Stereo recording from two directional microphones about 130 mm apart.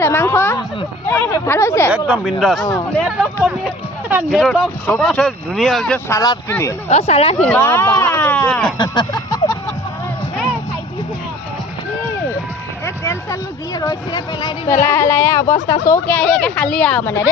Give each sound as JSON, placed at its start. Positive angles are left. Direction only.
{"t": 0.0, "sound": "speech", "side_deg": 20}
{"t": 1.9, "sound": "speech", "side_deg": -10}
{"t": 4.1, "sound": "speech", "side_deg": -10}
{"t": 6.1, "sound": "speech", "side_deg": 25}
{"t": 6.8, "sound": "speech", "side_deg": 55}
{"t": 7.3, "sound": "speech", "side_deg": 10}
{"t": 8.0, "sound": "a sound", "side_deg": 15}
{"t": 8.4, "sound": "speech", "side_deg": 5}
{"t": 8.8, "sound": "a sound", "side_deg": 35}
{"t": 12.8, "sound": "speech", "side_deg": 20}
{"t": 14.7, "sound": "speech", "side_deg": 20}